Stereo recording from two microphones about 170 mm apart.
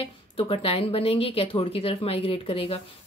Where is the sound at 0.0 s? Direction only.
35° left (ahead or behind).